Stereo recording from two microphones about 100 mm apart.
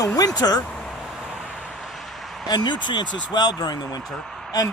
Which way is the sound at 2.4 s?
45° left (ahead or behind).